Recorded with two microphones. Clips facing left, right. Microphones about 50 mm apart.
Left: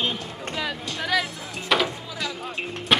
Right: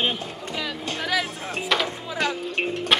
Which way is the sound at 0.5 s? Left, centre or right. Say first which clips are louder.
Even; centre.